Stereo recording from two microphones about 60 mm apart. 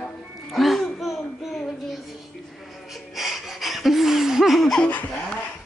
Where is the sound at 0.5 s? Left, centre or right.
Centre.